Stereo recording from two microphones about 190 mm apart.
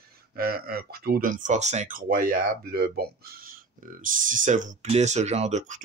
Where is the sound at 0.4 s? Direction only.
50° right (ahead or behind).